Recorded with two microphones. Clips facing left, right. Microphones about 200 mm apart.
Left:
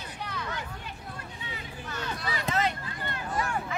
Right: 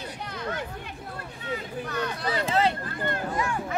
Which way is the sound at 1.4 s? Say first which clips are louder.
Right 11 dB; 55° right (ahead or behind).